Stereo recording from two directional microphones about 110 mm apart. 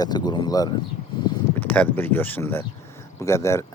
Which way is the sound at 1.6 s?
15° left (ahead or behind).